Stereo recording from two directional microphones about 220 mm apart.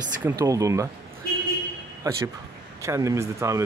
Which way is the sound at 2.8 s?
15° right (ahead or behind).